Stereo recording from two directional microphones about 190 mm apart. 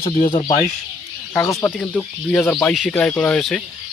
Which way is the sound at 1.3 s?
10° left (ahead or behind).